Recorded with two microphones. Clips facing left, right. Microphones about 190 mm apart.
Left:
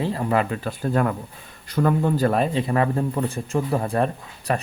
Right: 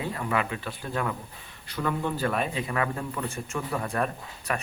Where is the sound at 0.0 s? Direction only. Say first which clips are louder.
Left 7 dB; 35° left (ahead or behind).